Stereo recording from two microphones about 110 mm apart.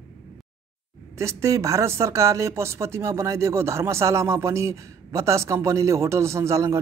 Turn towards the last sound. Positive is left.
turn(degrees=-25)  # may be behind; listen again after turning